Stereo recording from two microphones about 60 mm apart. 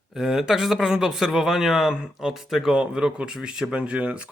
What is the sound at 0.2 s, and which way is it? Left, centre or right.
Speech, centre.